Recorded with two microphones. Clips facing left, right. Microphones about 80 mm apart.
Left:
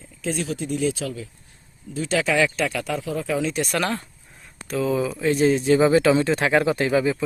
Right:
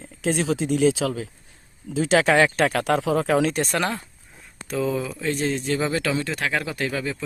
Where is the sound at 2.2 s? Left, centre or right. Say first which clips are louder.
Right 3 dB; right.